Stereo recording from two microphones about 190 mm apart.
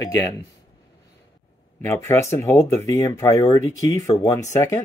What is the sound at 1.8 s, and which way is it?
Speech, 15° left (ahead or behind).